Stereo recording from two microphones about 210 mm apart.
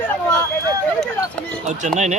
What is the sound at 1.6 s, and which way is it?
Bird, 35° right (ahead or behind).